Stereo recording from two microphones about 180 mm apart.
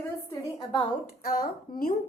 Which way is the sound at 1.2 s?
50° left (ahead or behind).